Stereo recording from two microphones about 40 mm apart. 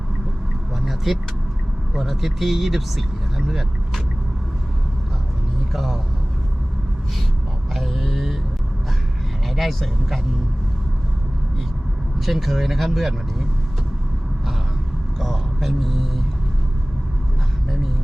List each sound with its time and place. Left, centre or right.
0.9 s vehicle: centre
2.0 s speech: centre
5.7 s speech: centre
7.7 s a sound: centre
9.6 s speech: centre
12.2 s speech: centre
15.2 s a sound: centre